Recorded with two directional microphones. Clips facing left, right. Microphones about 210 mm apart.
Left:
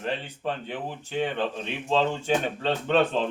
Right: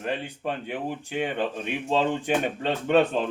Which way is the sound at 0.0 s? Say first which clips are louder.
Right 1 dB; 10° right (ahead or behind).